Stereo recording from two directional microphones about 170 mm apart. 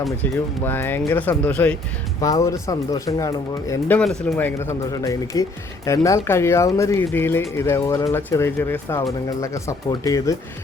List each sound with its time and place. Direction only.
0.0 s speech: 10° left (ahead or behind)
2.2 s speech: 20° left (ahead or behind)
3.9 s speech: 5° left (ahead or behind); by 10.3 s 20° left (ahead or behind)